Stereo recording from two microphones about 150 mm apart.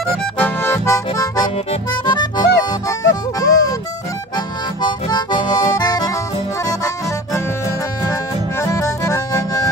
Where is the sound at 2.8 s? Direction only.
25° left (ahead or behind).